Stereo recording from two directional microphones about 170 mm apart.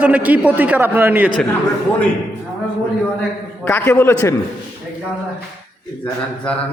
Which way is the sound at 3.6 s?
10° left (ahead or behind).